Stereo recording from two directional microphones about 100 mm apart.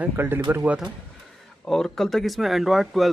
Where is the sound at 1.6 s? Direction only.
5° left (ahead or behind).